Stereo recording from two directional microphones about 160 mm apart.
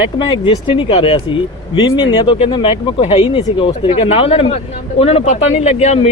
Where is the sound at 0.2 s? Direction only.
30° left (ahead or behind).